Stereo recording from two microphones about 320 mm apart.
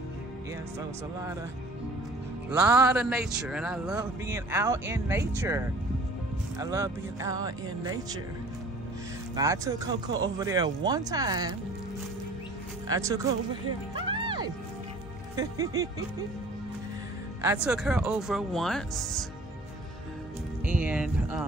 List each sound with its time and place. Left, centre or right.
2.7 s speech: centre
9.3 s speech: centre
12.8 s speech: centre
13.9 s music: centre
15.3 s speech: centre
17.4 s speech: centre
20.6 s speech: centre